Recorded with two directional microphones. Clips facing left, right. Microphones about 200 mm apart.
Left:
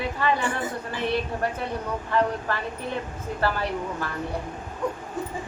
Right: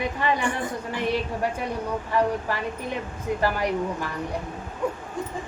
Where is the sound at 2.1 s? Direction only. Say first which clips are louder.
Even; 10° right (ahead or behind).